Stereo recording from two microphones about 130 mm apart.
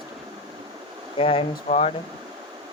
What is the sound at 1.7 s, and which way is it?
Speech, 55° left (ahead or behind).